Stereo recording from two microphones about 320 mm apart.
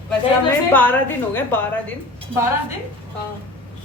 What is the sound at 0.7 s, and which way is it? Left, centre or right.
Speech, centre.